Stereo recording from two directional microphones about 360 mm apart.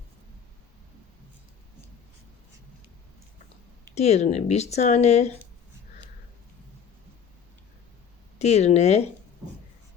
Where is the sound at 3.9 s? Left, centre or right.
Centre.